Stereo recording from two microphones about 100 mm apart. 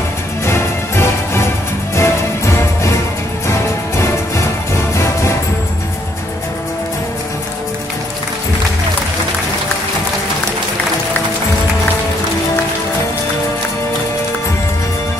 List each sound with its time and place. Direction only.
0.5 s music: 25° left (ahead or behind)